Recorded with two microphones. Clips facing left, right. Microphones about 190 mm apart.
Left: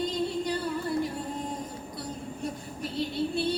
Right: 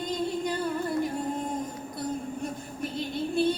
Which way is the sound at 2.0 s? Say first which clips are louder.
Right 4 dB; 50° right (ahead or behind).